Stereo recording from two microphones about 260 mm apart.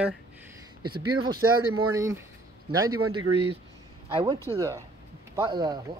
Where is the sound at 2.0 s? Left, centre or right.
Centre.